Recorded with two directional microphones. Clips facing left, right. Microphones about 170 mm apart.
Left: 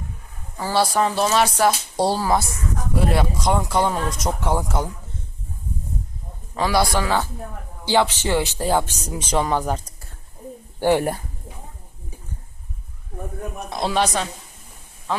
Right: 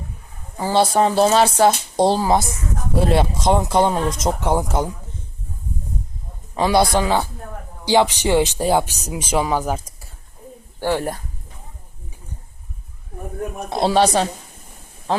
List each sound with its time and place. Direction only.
0.5 s speech: 20° right (ahead or behind)
6.5 s speech: 20° right (ahead or behind)
10.8 s speech: 15° left (ahead or behind)
13.7 s speech: 30° right (ahead or behind)